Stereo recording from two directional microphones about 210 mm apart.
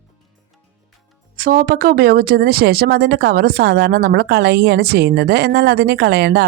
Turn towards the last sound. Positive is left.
turn(degrees=-50)  # may be behind; listen again after turning